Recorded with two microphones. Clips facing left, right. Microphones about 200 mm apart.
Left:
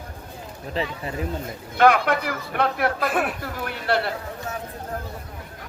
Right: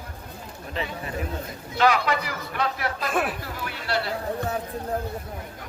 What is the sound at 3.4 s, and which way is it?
Speech, 55° left (ahead or behind).